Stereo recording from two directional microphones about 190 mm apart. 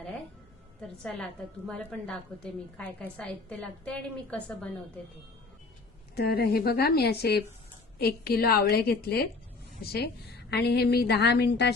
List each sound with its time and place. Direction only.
0.8 s a woman's voice: 5° left (ahead or behind)
6.1 s a woman's voice: 55° left (ahead or behind)